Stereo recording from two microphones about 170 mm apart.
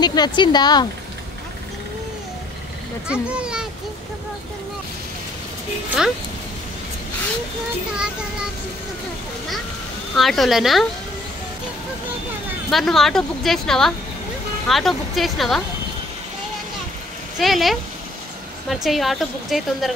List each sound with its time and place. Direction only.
0.0 s speech: 25° left (ahead or behind)
3.1 s speech: 5° right (ahead or behind)
10.1 s speech: centre (ahead or behind)
12.7 s speech: centre (ahead or behind)
17.4 s speech: centre (ahead or behind)